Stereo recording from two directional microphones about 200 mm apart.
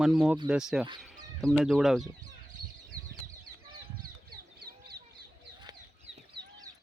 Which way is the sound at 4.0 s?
45° right (ahead or behind).